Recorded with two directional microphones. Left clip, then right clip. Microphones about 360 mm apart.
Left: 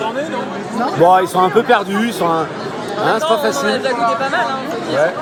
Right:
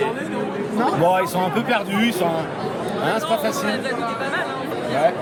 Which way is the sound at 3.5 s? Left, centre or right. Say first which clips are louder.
Left 7 dB; centre.